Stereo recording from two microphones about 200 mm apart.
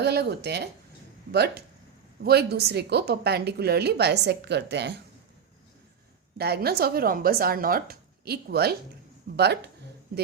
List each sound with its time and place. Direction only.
0.0 s a woman's voice: 55° right (ahead or behind)
6.3 s speech: 50° right (ahead or behind)